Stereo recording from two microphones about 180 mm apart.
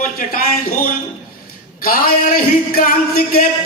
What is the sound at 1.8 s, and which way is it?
Speech, 55° left (ahead or behind).